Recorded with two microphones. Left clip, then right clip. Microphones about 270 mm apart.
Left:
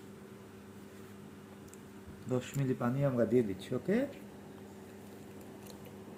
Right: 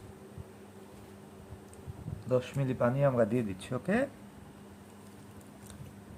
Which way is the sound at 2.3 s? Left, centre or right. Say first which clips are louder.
Right 5 dB; right.